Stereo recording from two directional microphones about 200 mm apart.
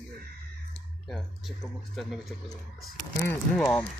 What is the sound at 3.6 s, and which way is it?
Speech, 10° left (ahead or behind).